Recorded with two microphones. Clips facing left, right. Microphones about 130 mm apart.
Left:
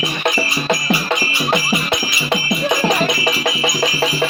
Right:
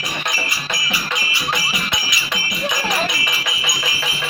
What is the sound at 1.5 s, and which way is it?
Music, 40° left (ahead or behind).